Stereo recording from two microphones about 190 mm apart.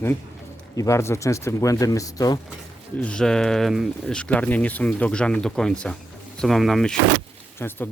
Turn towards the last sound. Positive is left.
turn(degrees=10)  # may be behind; listen again after turning